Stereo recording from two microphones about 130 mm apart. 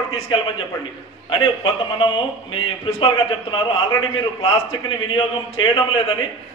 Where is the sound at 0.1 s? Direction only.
40° left (ahead or behind).